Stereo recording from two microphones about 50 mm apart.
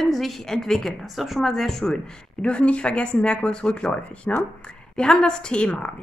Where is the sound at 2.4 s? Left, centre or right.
Left.